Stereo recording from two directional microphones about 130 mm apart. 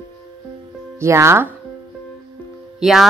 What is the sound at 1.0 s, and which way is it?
Speech, 20° right (ahead or behind).